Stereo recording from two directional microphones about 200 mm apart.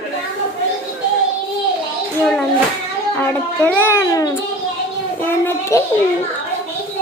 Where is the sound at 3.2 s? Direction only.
5° left (ahead or behind).